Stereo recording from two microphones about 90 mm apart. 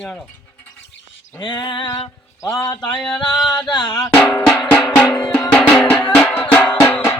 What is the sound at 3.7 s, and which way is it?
Speech, 50° left (ahead or behind).